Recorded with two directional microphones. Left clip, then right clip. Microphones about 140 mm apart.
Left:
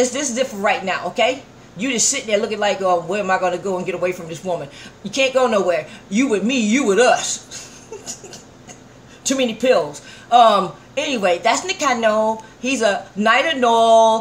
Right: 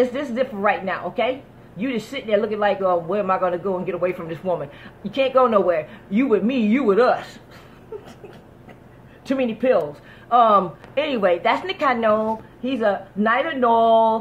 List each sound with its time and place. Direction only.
0.0 s a woman's voice: 30° left (ahead or behind)
9.3 s speech: 55° left (ahead or behind)
10.3 s a woman's voice: 30° left (ahead or behind)